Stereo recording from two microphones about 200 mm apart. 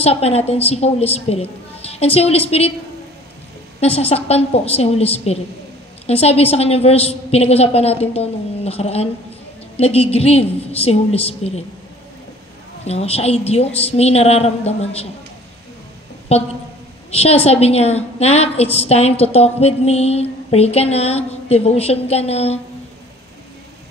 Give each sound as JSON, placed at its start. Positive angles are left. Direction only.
{"t": 0.0, "sound": "a woman's voice", "side_deg": 30}
{"t": 3.8, "sound": "a woman's voice", "side_deg": 30}
{"t": 12.8, "sound": "a woman's voice", "side_deg": 30}
{"t": 17.1, "sound": "a woman's voice", "side_deg": 30}